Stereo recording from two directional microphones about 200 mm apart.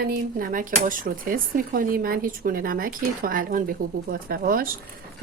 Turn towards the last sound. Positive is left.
turn(degrees=-45)  # may be behind; listen again after turning